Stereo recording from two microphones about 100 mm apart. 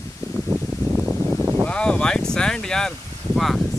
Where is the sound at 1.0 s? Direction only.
10° right (ahead or behind).